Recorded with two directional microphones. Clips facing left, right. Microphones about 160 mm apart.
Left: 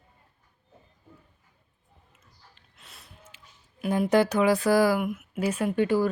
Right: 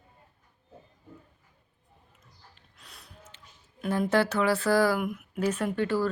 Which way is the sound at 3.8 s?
10° left (ahead or behind).